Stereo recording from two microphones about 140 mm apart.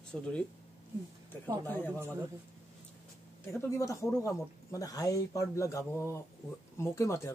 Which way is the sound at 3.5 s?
20° left (ahead or behind).